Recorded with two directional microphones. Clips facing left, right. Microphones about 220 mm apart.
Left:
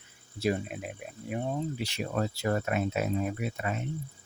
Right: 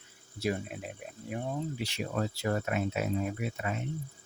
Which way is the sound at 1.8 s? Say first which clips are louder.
Left 2 dB; 45° left (ahead or behind).